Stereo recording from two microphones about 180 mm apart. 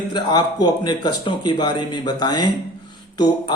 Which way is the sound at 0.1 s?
25° left (ahead or behind).